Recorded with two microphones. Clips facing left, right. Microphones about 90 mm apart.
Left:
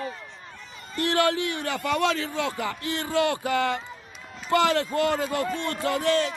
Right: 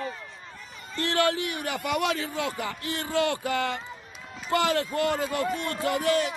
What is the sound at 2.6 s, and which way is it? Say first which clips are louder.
A man's voice: left 3 dB; 25° left (ahead or behind).